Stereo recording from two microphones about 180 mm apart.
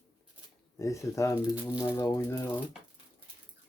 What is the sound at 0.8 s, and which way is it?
Speech, 15° left (ahead or behind).